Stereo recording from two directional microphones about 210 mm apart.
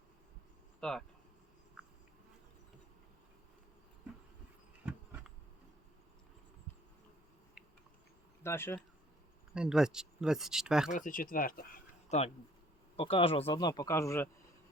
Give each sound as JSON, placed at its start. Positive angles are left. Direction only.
{"t": 0.8, "sound": "speech", "side_deg": 5}
{"t": 8.4, "sound": "speech", "side_deg": 10}
{"t": 9.6, "sound": "speech", "side_deg": -5}
{"t": 10.9, "sound": "speech", "side_deg": 40}
{"t": 12.0, "sound": "a man's voice", "side_deg": 30}